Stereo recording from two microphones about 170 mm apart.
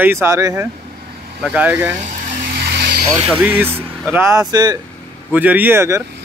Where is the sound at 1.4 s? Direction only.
5° right (ahead or behind).